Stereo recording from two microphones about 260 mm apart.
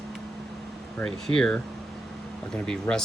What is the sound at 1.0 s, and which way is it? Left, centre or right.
Speech, centre.